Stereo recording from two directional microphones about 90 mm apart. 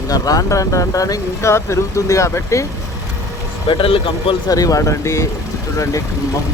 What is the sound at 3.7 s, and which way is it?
Speech, 70° left (ahead or behind).